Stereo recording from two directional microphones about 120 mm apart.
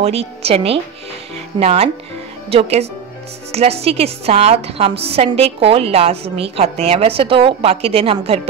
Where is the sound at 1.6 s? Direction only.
65° right (ahead or behind).